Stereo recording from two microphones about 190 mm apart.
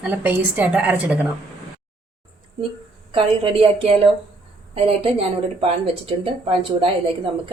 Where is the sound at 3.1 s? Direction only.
30° right (ahead or behind).